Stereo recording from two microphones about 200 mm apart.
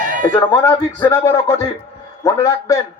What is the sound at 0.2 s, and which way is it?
A man's voice, 20° left (ahead or behind).